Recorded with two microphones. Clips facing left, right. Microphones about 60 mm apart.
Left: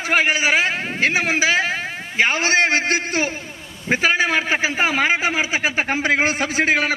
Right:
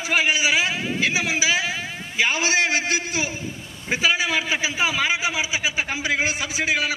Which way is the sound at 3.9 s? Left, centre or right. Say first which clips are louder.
Left 4 dB; left.